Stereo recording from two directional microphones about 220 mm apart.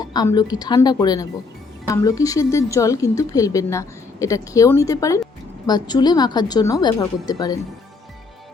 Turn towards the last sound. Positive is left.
turn(degrees=15)  # may be behind; listen again after turning